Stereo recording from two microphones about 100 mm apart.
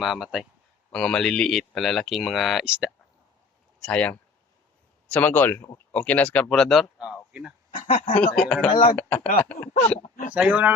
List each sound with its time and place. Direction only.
0.0 s speech: 5° right (ahead or behind)
0.9 s speech: 5° left (ahead or behind)
2.6 s speech: 10° right (ahead or behind)
3.8 s speech: 10° left (ahead or behind)
7.7 s speech: 65° left (ahead or behind)
8.2 s speech: 10° left (ahead or behind)
8.6 s speech: 70° left (ahead or behind)
9.0 s speech: 15° left (ahead or behind)
10.3 s speech: 15° right (ahead or behind)